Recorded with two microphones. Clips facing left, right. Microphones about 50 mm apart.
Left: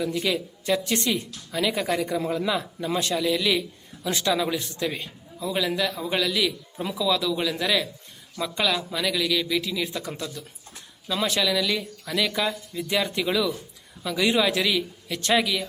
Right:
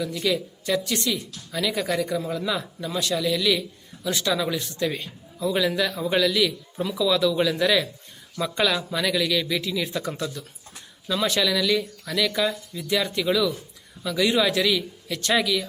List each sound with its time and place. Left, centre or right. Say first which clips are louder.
0.0 s speech: even; centre
1.5 s speech: even; centre
2.9 s speech: left 1 dB; left
3.2 s a man's voice: right 2 dB; centre